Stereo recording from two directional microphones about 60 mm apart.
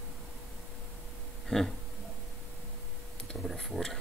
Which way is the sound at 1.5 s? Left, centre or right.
Centre.